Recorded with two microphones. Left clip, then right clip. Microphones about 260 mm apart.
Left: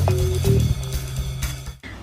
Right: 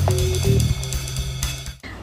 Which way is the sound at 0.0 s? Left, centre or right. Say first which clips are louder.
Right 1 dB; centre.